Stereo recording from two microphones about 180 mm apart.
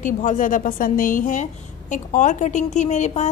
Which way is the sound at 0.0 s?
45° left (ahead or behind).